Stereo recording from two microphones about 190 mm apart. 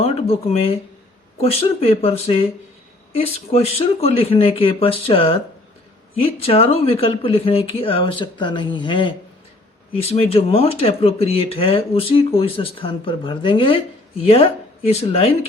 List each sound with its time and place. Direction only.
0.0 s speech: 30° left (ahead or behind)